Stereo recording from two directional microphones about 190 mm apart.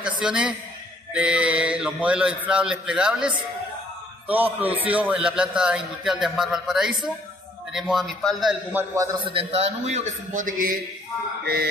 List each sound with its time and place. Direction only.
0.2 s a man's voice: 5° right (ahead or behind)
8.7 s a man's voice: 15° right (ahead or behind)
9.3 s a man's voice: 30° right (ahead or behind); by 10.8 s 45° right (ahead or behind)
11.4 s speech: 55° right (ahead or behind)